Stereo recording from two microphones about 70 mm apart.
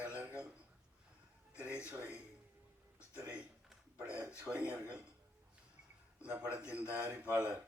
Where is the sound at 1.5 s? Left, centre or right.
Right.